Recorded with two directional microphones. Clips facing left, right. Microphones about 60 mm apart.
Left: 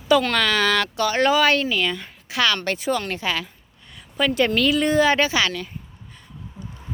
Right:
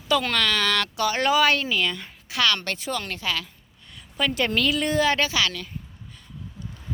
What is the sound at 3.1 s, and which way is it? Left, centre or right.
Speech, left.